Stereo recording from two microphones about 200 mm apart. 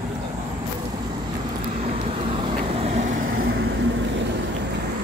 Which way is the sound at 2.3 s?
30° right (ahead or behind).